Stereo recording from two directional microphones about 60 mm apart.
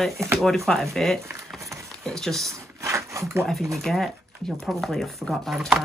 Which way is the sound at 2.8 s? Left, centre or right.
Right.